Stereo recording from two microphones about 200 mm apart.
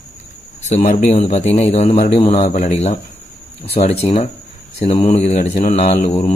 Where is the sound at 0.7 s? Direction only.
35° left (ahead or behind).